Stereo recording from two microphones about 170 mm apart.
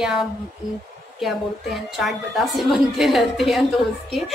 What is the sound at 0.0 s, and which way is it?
Speech, centre (ahead or behind).